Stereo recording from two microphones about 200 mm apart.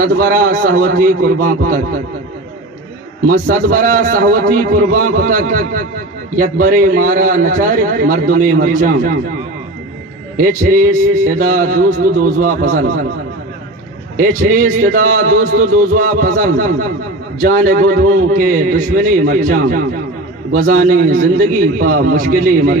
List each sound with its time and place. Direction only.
0.0 s a man's voice: 45° right (ahead or behind)
3.3 s a man's voice: 45° right (ahead or behind)
10.3 s a man's voice: 40° right (ahead or behind)
14.1 s a man's voice: 40° right (ahead or behind)